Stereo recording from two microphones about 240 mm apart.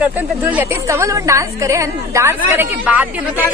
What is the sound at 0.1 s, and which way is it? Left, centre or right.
A woman's voice, centre.